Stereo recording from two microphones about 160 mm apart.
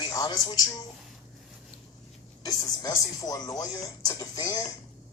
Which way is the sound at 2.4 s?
25° left (ahead or behind).